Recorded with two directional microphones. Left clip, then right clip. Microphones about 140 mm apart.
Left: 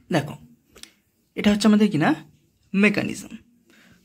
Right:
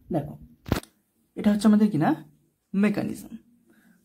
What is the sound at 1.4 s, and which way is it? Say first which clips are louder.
A man's voice: left 3 dB; 5° left (ahead or behind).